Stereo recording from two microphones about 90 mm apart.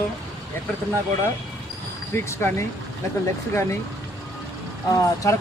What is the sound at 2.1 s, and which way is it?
Speech, 30° left (ahead or behind).